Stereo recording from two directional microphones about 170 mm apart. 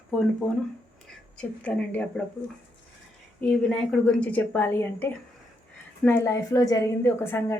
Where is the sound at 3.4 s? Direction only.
5° left (ahead or behind).